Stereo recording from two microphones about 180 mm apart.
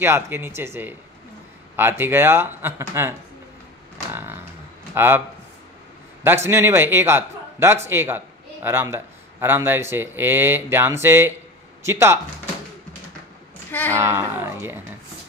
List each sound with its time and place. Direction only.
0.0 s speech: 15° right (ahead or behind)
6.2 s speech: 15° right (ahead or behind)
13.7 s speech: 10° left (ahead or behind)
13.9 s speech: 15° right (ahead or behind)